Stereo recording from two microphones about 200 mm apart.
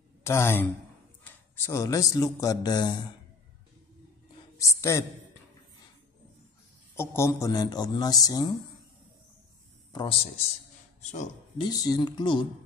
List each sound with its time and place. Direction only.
0.2 s a man's voice: 10° left (ahead or behind)
4.6 s a man's voice: 15° left (ahead or behind)
7.0 s a man's voice: 15° left (ahead or behind)
9.9 s a man's voice: 30° left (ahead or behind)
11.6 s a man's voice: 20° left (ahead or behind)